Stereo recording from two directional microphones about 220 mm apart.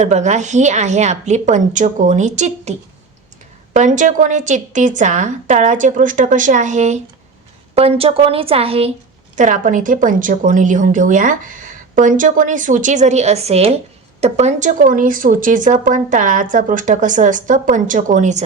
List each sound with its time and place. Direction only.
0.0 s a woman's voice: 30° right (ahead or behind)